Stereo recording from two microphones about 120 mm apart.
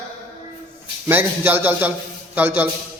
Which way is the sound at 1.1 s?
15° right (ahead or behind).